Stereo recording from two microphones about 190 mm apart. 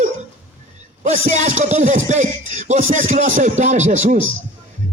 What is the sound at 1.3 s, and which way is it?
Speech, 35° right (ahead or behind).